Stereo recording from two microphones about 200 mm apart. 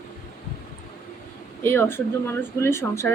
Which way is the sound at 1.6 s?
10° left (ahead or behind).